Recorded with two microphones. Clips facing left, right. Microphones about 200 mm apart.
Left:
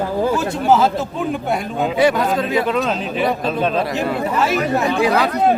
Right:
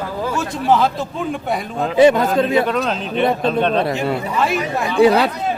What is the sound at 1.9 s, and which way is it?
Speech, 25° right (ahead or behind).